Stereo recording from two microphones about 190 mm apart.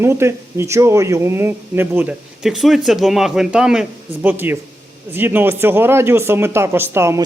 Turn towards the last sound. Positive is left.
turn(degrees=-15)  # may be behind; listen again after turning